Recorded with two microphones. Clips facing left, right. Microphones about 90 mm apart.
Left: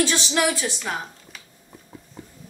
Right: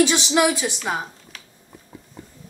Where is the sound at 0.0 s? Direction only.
15° right (ahead or behind).